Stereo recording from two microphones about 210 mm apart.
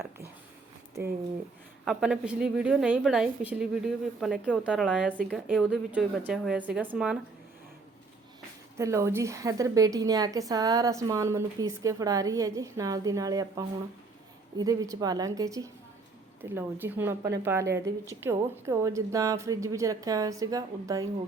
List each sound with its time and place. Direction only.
1.8 s a woman's voice: 5° right (ahead or behind)
8.8 s a woman's voice: 15° right (ahead or behind)